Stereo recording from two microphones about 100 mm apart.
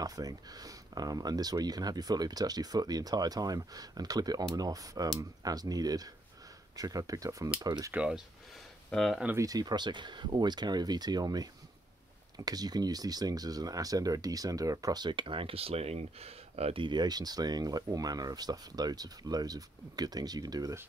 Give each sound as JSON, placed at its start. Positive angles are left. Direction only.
{"t": 0.0, "sound": "speech", "side_deg": -40}
{"t": 7.9, "sound": "speech", "side_deg": -10}
{"t": 8.9, "sound": "speech", "side_deg": 5}
{"t": 9.4, "sound": "speech", "side_deg": -40}
{"t": 16.8, "sound": "speech", "side_deg": -45}